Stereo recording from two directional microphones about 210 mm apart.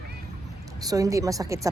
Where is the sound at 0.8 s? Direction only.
15° right (ahead or behind).